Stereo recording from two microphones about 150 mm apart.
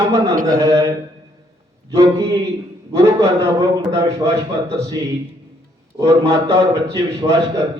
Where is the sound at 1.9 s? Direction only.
20° right (ahead or behind).